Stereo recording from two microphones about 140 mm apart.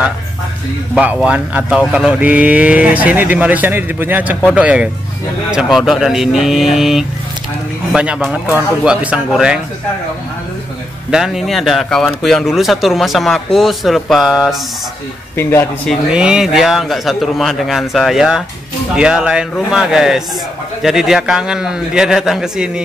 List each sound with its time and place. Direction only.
0.9 s speech: 10° right (ahead or behind)
11.1 s speech: 5° right (ahead or behind)
15.3 s speech: 15° left (ahead or behind)
16.1 s speech: 5° right (ahead or behind)